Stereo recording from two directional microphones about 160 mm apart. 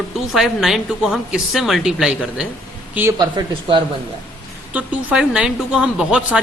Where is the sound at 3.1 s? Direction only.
25° right (ahead or behind).